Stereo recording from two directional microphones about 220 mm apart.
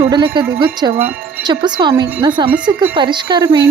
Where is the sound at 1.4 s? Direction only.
20° right (ahead or behind).